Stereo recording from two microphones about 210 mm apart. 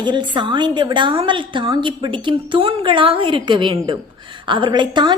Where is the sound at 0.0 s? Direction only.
20° right (ahead or behind).